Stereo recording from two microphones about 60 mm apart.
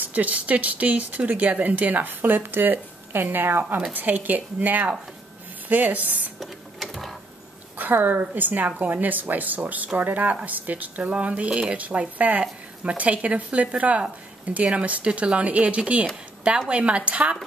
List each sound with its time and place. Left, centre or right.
0.0 s speech: right
6.4 s printer: centre
7.7 s speech: right